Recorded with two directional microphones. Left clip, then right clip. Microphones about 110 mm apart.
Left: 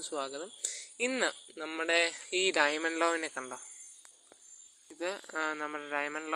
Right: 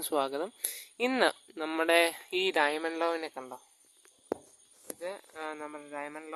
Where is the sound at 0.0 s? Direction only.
60° right (ahead or behind).